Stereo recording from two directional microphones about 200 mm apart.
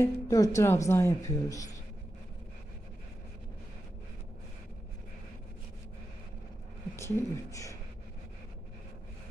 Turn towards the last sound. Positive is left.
turn(degrees=15)  # may be behind; listen again after turning